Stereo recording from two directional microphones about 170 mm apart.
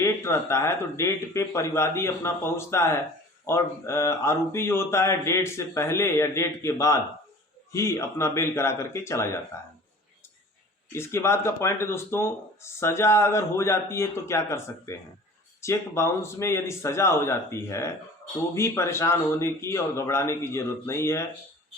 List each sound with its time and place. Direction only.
0.0 s speech: 15° left (ahead or behind)
10.9 s speech: 15° left (ahead or behind)